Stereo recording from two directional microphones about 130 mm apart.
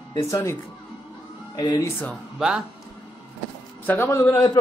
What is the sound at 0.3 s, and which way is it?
Speech, 20° left (ahead or behind).